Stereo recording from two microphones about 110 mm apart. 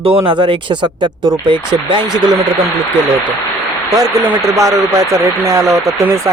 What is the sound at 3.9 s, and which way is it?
Speech, 35° right (ahead or behind).